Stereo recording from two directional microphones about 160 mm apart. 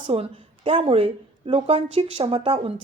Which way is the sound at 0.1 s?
35° right (ahead or behind).